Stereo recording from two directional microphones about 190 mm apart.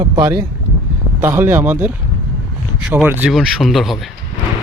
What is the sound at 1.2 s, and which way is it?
A man's voice, 10° right (ahead or behind).